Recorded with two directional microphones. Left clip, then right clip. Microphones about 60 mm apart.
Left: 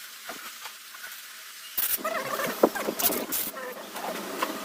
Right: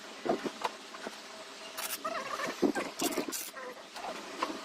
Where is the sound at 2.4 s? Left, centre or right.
Centre.